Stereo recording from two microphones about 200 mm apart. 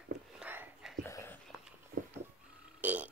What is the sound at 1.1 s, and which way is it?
Dog, 15° left (ahead or behind).